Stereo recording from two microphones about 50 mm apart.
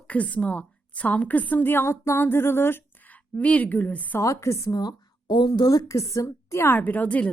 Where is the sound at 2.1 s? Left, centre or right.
Left.